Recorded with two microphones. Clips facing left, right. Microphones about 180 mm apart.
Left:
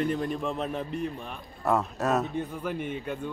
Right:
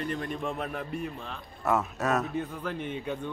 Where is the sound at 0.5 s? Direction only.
25° left (ahead or behind).